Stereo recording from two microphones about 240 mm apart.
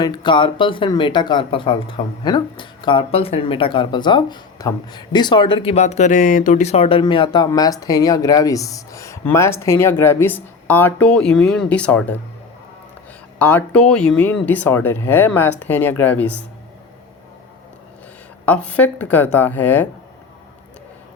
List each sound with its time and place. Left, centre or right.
0.0 s speech: centre
13.4 s speech: centre
18.4 s speech: centre